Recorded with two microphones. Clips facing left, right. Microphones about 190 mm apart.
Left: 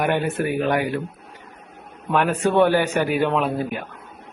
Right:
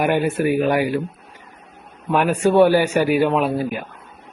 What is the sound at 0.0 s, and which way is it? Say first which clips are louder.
Speech: right 3 dB; 10° right (ahead or behind).